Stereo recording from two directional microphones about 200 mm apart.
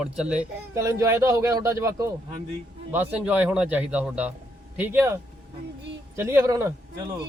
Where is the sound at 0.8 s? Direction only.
15° right (ahead or behind).